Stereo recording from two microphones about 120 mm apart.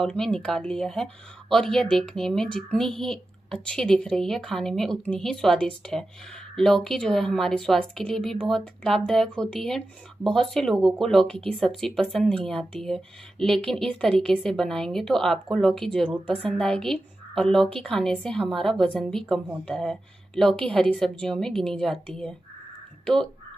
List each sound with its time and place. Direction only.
0.0 s a woman's voice: 5° left (ahead or behind)